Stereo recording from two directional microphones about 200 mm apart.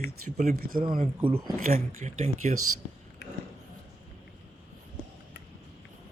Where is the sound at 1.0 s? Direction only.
25° right (ahead or behind).